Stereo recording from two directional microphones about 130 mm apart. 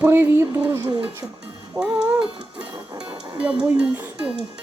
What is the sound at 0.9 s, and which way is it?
Speech, 40° right (ahead or behind).